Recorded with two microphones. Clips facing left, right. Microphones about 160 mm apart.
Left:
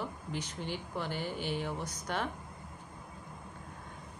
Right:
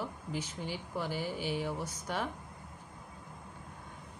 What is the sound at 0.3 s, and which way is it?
Speech, 10° right (ahead or behind).